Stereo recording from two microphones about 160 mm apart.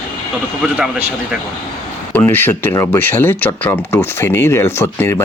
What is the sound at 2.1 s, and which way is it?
Speech, 15° left (ahead or behind).